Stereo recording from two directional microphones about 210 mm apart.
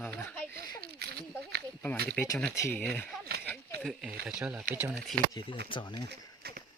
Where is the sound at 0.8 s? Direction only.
50° right (ahead or behind).